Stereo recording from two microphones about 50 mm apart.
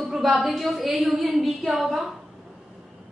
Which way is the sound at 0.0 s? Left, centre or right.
Centre.